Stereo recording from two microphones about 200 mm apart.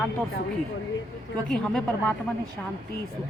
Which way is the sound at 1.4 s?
5° left (ahead or behind).